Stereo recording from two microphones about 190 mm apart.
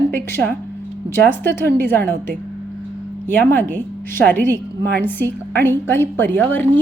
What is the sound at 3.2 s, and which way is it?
Speech, 10° left (ahead or behind).